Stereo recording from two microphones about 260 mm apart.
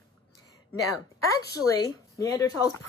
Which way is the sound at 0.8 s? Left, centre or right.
Centre.